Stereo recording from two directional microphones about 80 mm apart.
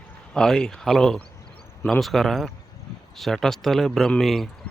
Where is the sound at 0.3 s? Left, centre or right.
Centre.